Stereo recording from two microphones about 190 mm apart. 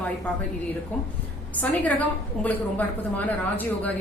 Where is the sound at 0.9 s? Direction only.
10° left (ahead or behind).